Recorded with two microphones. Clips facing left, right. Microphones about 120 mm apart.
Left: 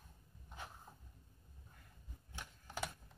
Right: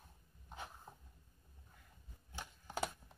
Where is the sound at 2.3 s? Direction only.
20° right (ahead or behind).